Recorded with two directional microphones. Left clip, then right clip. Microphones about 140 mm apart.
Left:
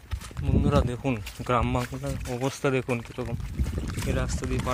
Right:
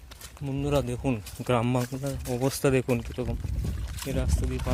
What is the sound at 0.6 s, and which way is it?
Speech, 40° right (ahead or behind).